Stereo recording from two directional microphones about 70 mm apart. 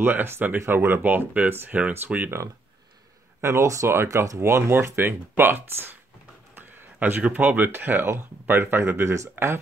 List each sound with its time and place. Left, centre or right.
0.0 s speech: right
3.3 s speech: right